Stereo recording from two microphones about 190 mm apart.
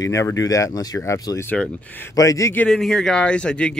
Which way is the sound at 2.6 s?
Centre (ahead or behind).